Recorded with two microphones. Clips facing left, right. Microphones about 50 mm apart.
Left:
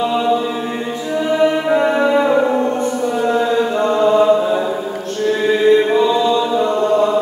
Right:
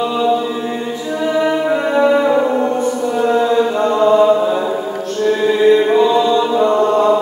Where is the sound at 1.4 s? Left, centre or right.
Centre.